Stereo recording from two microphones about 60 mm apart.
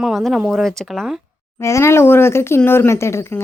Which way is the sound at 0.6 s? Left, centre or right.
Centre.